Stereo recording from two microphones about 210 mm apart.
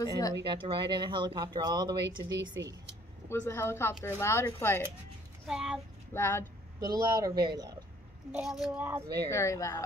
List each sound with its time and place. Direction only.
0.3 s speech: 25° right (ahead or behind)
2.5 s speech: 55° right (ahead or behind)
3.3 s speech: 10° left (ahead or behind)
5.5 s speech: 5° right (ahead or behind)
6.1 s speech: 10° left (ahead or behind)
6.8 s speech: 15° right (ahead or behind)
8.3 s speech: 5° right (ahead or behind)
9.3 s speech: 15° left (ahead or behind)